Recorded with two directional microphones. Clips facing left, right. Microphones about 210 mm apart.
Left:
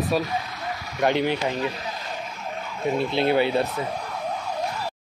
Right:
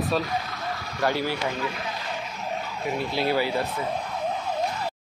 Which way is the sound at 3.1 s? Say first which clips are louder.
Left 3 dB; 25° left (ahead or behind).